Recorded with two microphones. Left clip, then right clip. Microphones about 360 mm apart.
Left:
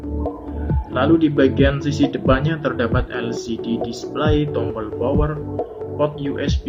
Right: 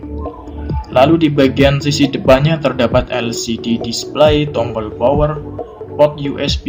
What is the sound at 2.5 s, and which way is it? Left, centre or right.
Speech, right.